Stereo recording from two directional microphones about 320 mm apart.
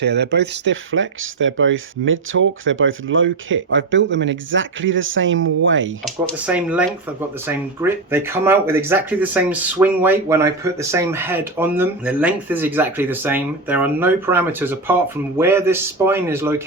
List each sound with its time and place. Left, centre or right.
0.0 s speech: right
6.2 s speech: centre